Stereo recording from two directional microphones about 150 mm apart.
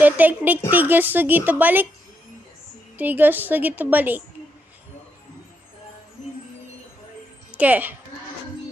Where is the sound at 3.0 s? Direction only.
10° right (ahead or behind).